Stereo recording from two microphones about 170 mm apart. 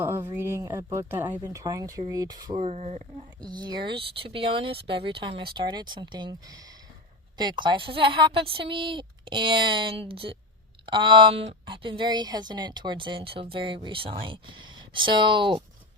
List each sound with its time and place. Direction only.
0.0 s a woman's voice: 15° right (ahead or behind)
2.6 s speech: 40° right (ahead or behind)
3.4 s a woman's voice: 25° right (ahead or behind)